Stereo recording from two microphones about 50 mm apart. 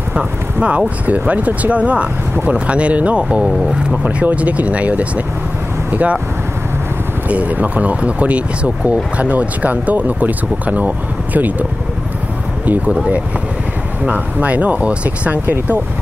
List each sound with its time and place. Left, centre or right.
0.1 s speech: right
7.2 s speech: right
12.6 s speech: right
12.9 s speech: right